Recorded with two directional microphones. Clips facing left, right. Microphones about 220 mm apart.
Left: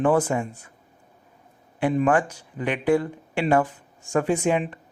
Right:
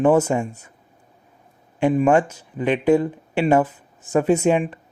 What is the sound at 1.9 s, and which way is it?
Speech, 20° right (ahead or behind).